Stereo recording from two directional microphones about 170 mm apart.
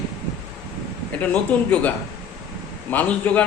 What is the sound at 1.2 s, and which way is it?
Speech, 10° left (ahead or behind).